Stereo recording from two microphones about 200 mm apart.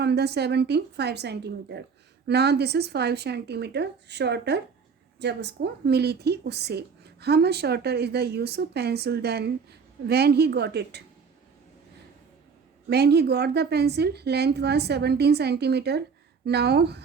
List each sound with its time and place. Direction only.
0.0 s speech: 55° right (ahead or behind)
12.9 s speech: 55° right (ahead or behind)